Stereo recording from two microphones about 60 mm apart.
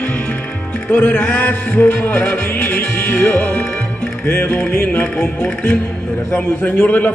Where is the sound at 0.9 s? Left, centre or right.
Left.